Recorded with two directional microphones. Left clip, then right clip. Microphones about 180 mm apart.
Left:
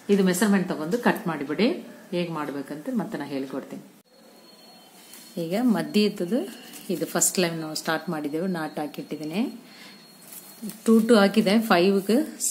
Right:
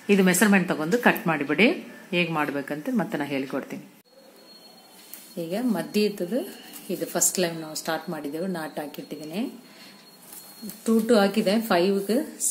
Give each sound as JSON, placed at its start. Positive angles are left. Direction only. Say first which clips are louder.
{"t": 0.0, "sound": "speech", "louder": "right 2 dB", "side_deg": -35}
{"t": 5.4, "sound": "a woman's voice", "louder": "left 3 dB", "side_deg": 30}
{"t": 10.8, "sound": "a woman's voice", "louder": "left 2 dB", "side_deg": 25}